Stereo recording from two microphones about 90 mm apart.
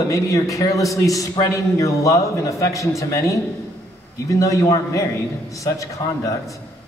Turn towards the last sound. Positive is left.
turn(degrees=35)  # may be behind; listen again after turning